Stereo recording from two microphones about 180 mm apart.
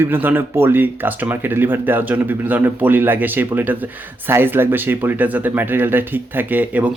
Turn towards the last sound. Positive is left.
turn(degrees=-10)  # may be behind; listen again after turning